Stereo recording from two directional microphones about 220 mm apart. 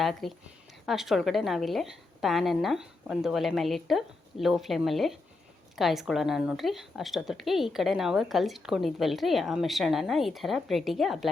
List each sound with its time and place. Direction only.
0.0 s a woman's voice: centre (ahead or behind)